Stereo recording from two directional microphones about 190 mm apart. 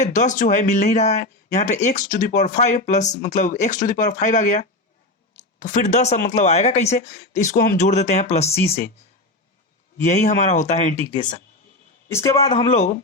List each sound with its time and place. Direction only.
0.0 s speech: 40° left (ahead or behind)
7.5 s speech: 50° left (ahead or behind)
7.8 s speech: 35° left (ahead or behind)
10.0 s speech: 40° left (ahead or behind)
12.0 s speech: 15° left (ahead or behind)